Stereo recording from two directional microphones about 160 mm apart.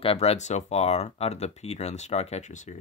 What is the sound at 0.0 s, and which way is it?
Speech, 35° left (ahead or behind).